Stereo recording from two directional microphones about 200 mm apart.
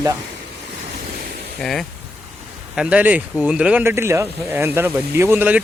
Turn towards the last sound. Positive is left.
turn(degrees=-10)  # may be behind; listen again after turning